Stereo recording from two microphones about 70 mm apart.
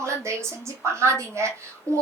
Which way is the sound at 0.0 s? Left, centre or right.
Right.